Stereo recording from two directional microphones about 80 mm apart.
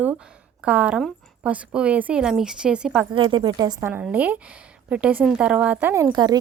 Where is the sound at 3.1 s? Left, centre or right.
Right.